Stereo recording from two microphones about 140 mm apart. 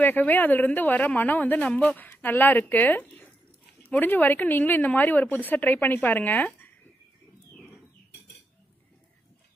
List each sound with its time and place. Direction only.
0.0 s speech: 10° left (ahead or behind)